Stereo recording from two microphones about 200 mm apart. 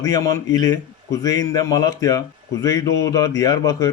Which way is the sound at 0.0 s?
15° left (ahead or behind).